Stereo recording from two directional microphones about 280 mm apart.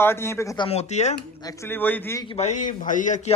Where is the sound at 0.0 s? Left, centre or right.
Centre; by 1.1 s left.